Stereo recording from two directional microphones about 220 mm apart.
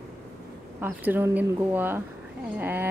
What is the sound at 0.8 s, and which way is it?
A woman's voice, 10° right (ahead or behind).